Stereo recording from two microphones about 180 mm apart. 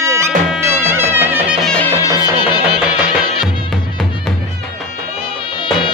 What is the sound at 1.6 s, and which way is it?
Music, 5° left (ahead or behind).